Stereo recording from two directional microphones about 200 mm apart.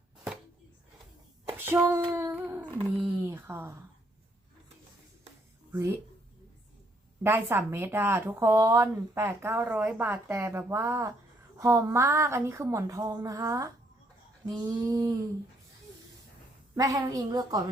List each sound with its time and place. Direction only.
1.5 s child singing: 10° right (ahead or behind)
2.7 s speech: centre (ahead or behind)
5.7 s a woman's voice: 15° right (ahead or behind)
7.2 s a woman's voice: 10° right (ahead or behind)
16.7 s a woman's voice: 15° right (ahead or behind)